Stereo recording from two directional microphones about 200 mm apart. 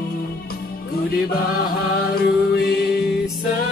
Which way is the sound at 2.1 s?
50° left (ahead or behind).